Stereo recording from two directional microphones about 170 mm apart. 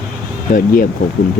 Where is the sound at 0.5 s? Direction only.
55° left (ahead or behind).